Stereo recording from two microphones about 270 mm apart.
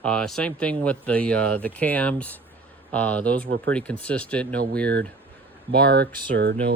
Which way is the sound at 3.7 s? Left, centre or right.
Centre.